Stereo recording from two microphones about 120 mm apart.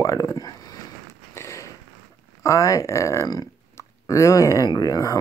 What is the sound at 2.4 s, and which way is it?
Speech, 25° left (ahead or behind).